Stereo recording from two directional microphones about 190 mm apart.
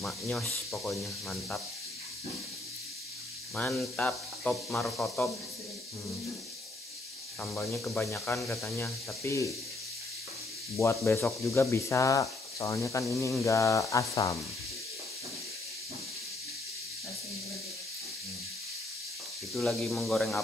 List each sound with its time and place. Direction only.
0.7 s speech: centre (ahead or behind)
3.5 s speech: 5° left (ahead or behind)
7.4 s speech: 5° left (ahead or behind)
10.8 s speech: 15° left (ahead or behind)
19.5 s speech: centre (ahead or behind)